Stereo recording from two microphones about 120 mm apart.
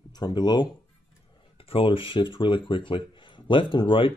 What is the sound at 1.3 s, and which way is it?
Speech, 50° left (ahead or behind).